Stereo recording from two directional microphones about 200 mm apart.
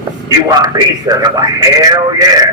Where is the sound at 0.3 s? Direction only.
20° right (ahead or behind).